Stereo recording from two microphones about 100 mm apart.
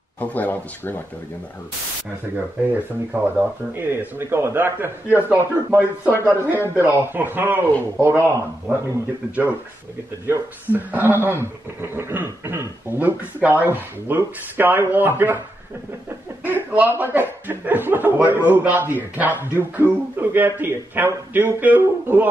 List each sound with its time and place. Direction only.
0.2 s speech: 15° left (ahead or behind)
2.3 s speech: 20° right (ahead or behind)
16.4 s speech: 20° right (ahead or behind)